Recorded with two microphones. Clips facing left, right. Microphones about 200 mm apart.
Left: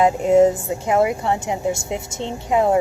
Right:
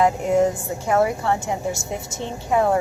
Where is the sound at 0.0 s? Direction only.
20° left (ahead or behind).